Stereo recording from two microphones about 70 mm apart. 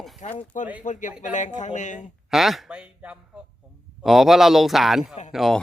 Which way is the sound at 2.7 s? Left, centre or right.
Centre.